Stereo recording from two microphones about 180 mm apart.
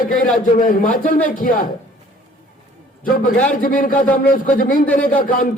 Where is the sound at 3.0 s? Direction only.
50° left (ahead or behind).